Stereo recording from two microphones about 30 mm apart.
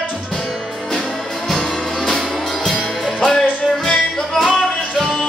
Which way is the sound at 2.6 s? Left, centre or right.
Centre.